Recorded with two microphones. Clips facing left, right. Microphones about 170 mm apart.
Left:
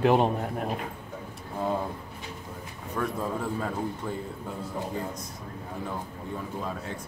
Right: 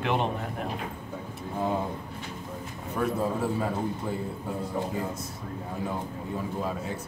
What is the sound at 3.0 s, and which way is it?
Speech, 10° right (ahead or behind).